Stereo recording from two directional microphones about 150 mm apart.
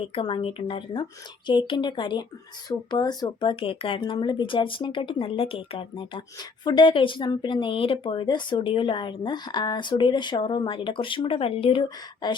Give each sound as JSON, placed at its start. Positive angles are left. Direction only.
{"t": 0.1, "sound": "speech", "side_deg": 35}